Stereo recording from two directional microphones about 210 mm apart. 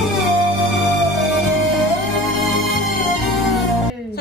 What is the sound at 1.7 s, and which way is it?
Music, centre (ahead or behind).